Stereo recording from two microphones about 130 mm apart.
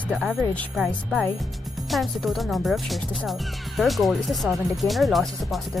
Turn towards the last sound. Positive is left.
turn(degrees=0)  # may be behind; listen again after turning